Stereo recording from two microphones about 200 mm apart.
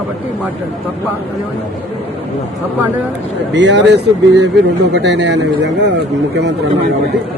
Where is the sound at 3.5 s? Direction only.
60° right (ahead or behind).